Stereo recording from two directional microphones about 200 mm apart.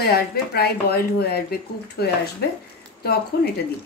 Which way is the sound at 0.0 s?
50° left (ahead or behind).